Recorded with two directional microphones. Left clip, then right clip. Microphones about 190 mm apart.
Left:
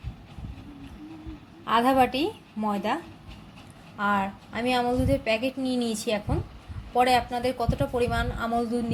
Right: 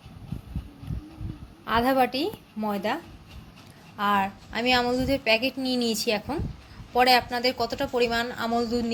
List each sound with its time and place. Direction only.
1.6 s a woman's voice: centre (ahead or behind)